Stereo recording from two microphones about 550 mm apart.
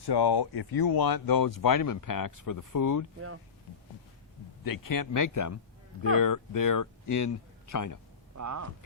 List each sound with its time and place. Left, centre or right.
0.0 s speech: left
3.2 s speech: right
4.6 s speech: left
8.4 s speech: right